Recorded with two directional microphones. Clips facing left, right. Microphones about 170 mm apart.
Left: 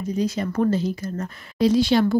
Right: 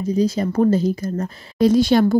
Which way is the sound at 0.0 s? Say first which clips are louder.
Right 5 dB; 35° right (ahead or behind).